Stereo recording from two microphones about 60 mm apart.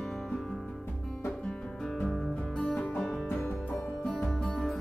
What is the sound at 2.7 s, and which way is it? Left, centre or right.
Music, left.